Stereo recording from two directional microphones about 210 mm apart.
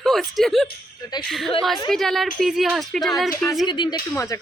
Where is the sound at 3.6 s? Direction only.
20° left (ahead or behind).